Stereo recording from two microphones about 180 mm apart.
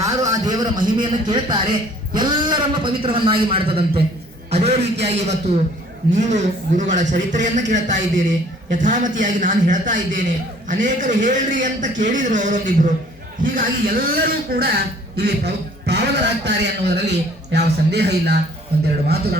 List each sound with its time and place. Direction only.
0.0 s a man's voice: 20° right (ahead or behind)
4.5 s a sound: 35° right (ahead or behind)
5.0 s a man's voice: 40° right (ahead or behind); by 19.4 s 60° right (ahead or behind)